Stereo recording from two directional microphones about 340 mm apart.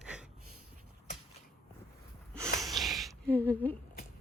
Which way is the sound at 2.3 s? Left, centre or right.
Centre.